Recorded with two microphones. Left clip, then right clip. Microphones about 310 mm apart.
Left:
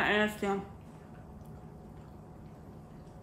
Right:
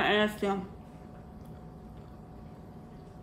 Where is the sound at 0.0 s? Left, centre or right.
Centre.